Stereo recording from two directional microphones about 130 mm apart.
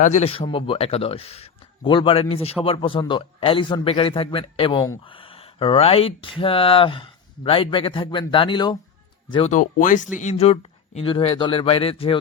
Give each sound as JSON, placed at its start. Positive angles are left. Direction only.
{"t": 0.2, "sound": "speech", "side_deg": 45}
{"t": 9.5, "sound": "speech", "side_deg": 90}
{"t": 10.2, "sound": "speech", "side_deg": 60}